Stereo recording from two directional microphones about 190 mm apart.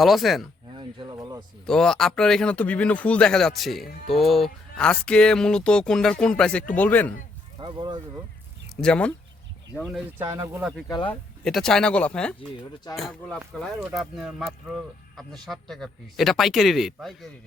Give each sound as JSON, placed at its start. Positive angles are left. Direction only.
{"t": 0.0, "sound": "speech", "side_deg": 0}
{"t": 0.8, "sound": "a sound", "side_deg": -25}
{"t": 1.6, "sound": "a man's voice", "side_deg": 5}
{"t": 7.6, "sound": "speech", "side_deg": -25}
{"t": 8.7, "sound": "speech", "side_deg": 5}
{"t": 10.2, "sound": "speech", "side_deg": -15}
{"t": 10.6, "sound": "speech", "side_deg": -5}
{"t": 10.8, "sound": "speech", "side_deg": 25}
{"t": 11.1, "sound": "speech", "side_deg": 5}